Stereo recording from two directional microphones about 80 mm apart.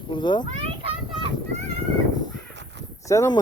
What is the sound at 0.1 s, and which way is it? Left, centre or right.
Speech, left.